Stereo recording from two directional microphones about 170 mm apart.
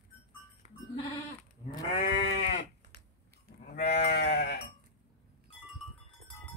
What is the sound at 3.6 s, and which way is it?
Livestock, 65° left (ahead or behind).